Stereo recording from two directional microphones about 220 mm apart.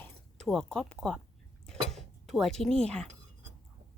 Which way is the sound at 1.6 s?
Centre (ahead or behind).